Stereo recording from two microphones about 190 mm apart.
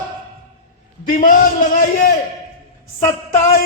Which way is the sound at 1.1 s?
45° left (ahead or behind).